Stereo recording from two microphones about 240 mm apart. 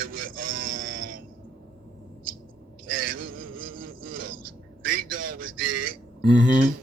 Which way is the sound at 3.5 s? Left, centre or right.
Right.